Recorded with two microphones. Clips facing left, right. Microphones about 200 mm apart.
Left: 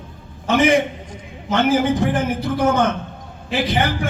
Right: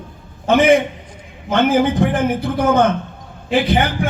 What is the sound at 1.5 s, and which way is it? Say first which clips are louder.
Speech: right 2 dB; 55° right (ahead or behind).